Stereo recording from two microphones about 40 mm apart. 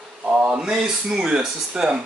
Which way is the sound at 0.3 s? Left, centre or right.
Right.